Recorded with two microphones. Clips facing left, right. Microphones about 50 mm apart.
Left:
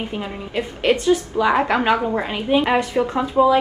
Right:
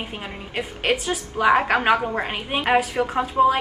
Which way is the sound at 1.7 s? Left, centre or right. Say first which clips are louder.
Left 1 dB; right.